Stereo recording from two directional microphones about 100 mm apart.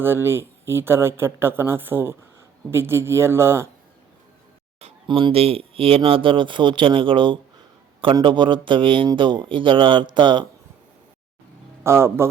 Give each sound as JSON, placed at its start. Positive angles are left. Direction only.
{"t": 0.0, "sound": "speech", "side_deg": -25}
{"t": 5.0, "sound": "speech", "side_deg": -50}
{"t": 5.3, "sound": "speech", "side_deg": -75}
{"t": 11.8, "sound": "speech", "side_deg": -25}